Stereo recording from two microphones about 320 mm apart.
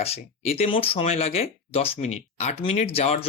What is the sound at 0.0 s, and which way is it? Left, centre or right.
Speech, centre.